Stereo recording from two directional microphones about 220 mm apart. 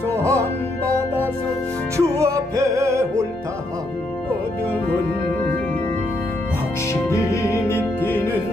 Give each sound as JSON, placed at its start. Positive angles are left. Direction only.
{"t": 0.1, "sound": "music", "side_deg": -15}
{"t": 2.0, "sound": "music", "side_deg": -15}
{"t": 6.9, "sound": "music", "side_deg": 15}